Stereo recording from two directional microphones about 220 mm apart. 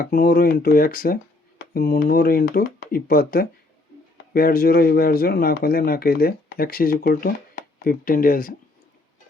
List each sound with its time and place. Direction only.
0.0 s speech: 40° left (ahead or behind)